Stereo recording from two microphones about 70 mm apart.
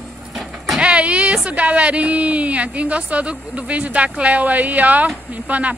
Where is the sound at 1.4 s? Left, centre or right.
Centre.